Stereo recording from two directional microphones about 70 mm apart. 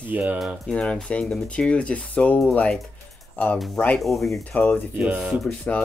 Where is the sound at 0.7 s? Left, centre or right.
Centre.